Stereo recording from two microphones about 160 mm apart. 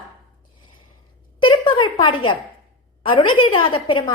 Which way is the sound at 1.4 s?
30° left (ahead or behind).